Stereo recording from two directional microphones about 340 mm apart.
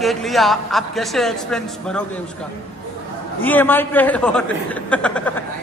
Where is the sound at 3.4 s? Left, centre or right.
Centre.